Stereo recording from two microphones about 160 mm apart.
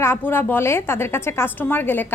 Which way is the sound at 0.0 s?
15° left (ahead or behind).